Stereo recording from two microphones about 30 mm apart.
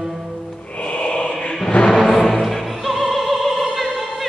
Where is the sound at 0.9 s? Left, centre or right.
Left.